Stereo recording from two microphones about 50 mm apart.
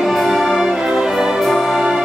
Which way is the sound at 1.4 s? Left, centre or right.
Centre.